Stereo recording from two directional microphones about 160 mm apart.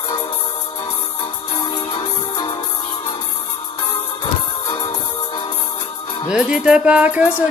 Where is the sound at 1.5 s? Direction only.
25° left (ahead or behind).